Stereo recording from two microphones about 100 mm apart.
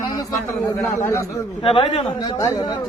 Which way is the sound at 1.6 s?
65° left (ahead or behind).